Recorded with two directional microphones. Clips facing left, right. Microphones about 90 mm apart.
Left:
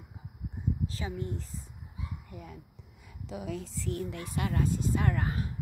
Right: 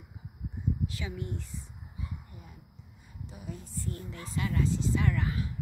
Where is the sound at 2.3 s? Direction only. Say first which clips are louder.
Left 6 dB; 85° left; by 5.5 s 45° left (ahead or behind).